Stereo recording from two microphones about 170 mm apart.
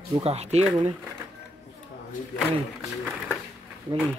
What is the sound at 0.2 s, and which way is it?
Speech, 40° right (ahead or behind).